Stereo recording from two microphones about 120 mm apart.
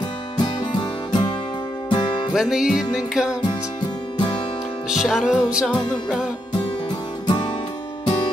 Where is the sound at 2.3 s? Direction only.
5° right (ahead or behind).